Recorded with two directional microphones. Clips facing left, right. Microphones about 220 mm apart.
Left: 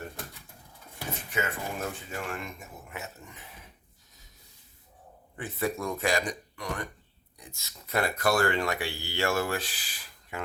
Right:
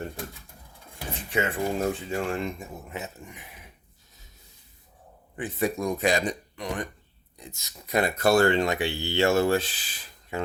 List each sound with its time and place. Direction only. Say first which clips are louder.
1.3 s speech: right 7 dB; 30° right (ahead or behind)
2.9 s speech: right 2 dB; 15° right (ahead or behind)
5.4 s speech: right 4 dB; 15° right (ahead or behind)